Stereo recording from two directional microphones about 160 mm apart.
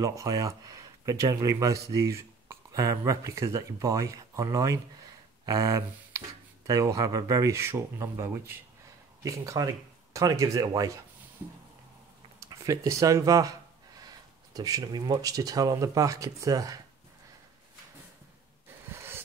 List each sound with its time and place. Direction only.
0.0 s speech: 20° right (ahead or behind)
6.7 s speech: 20° right (ahead or behind)
12.4 s speech: 20° right (ahead or behind)
18.9 s gasp: 15° right (ahead or behind)